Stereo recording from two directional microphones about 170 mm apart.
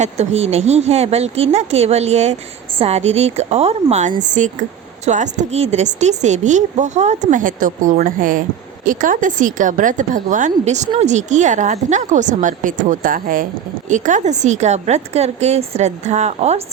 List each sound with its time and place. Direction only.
0.0 s speech: 40° right (ahead or behind)